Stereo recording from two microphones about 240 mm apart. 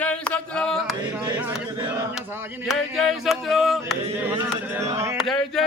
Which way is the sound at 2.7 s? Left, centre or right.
Centre.